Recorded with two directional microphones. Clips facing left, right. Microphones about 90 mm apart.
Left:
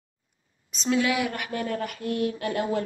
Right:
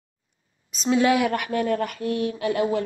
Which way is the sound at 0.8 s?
30° right (ahead or behind).